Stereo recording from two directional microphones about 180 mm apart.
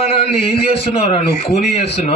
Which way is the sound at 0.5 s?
35° left (ahead or behind).